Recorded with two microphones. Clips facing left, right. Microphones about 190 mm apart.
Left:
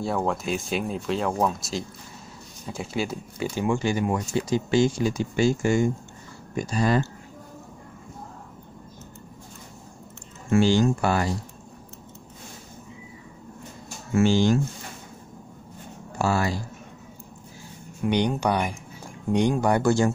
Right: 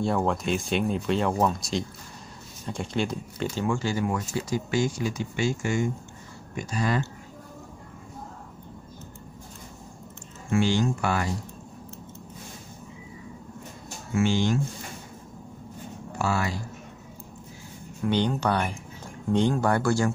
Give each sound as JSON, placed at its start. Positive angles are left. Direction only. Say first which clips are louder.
{"t": 0.0, "sound": "speech", "louder": "right 1 dB", "side_deg": 0}
{"t": 10.5, "sound": "speech", "louder": "left 4 dB", "side_deg": 35}
{"t": 14.1, "sound": "speech", "louder": "left 4 dB", "side_deg": 35}
{"t": 16.2, "sound": "speech", "louder": "left 3 dB", "side_deg": 35}
{"t": 18.0, "sound": "speech", "louder": "left 2 dB", "side_deg": 15}